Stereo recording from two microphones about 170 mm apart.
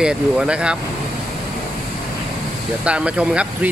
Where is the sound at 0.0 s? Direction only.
5° right (ahead or behind).